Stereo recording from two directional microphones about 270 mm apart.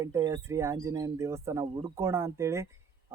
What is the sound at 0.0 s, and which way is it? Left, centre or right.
Speech, centre.